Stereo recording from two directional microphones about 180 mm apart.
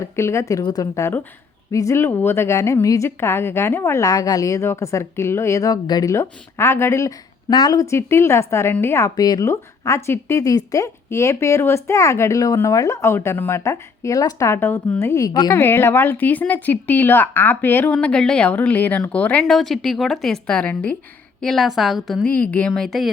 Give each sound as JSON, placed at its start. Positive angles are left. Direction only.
{"t": 0.0, "sound": "a woman's voice", "side_deg": 15}